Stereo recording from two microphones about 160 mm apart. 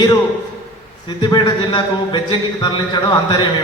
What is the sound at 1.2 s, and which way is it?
A man's voice, 25° left (ahead or behind).